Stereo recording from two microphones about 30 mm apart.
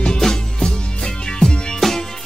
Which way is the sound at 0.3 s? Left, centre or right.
Left.